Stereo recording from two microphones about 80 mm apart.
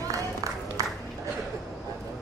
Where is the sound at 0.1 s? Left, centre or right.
Right.